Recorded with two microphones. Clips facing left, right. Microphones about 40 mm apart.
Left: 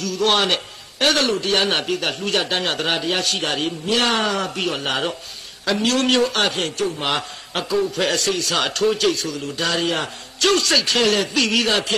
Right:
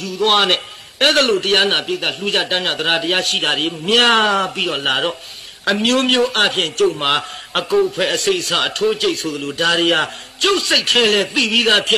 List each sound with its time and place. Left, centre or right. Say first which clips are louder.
0.0 s speech: right 3 dB; right
0.4 s a man's voice: right 4 dB; right
1.7 s speech: right 2 dB; right
2.9 s a man's voice: right 7 dB; right
10.4 s speech: right 1 dB; right
10.8 s a man's voice: right 4 dB; right
11.3 s speech: right 3 dB; right
11.6 s a man's voice: right 5 dB; right